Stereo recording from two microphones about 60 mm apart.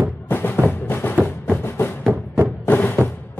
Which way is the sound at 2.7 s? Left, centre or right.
Left.